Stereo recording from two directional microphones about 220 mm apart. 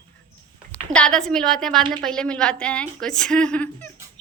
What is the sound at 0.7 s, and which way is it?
A woman's voice, 5° left (ahead or behind).